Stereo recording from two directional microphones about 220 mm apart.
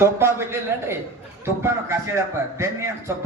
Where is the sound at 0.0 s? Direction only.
10° right (ahead or behind).